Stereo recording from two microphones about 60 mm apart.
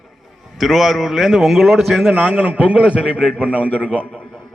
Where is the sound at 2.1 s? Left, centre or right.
Right.